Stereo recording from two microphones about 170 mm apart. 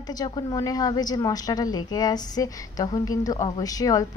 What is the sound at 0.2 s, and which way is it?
A woman's voice, 20° left (ahead or behind).